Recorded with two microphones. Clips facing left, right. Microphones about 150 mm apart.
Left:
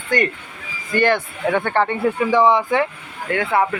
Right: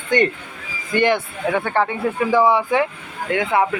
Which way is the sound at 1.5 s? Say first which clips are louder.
Left 1 dB; 5° right (ahead or behind).